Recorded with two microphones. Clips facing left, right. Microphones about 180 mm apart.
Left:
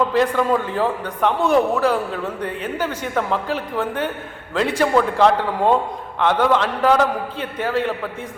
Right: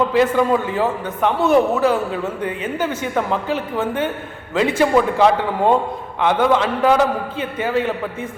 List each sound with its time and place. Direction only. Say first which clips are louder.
0.1 s a man's voice: right 2 dB; 5° right (ahead or behind)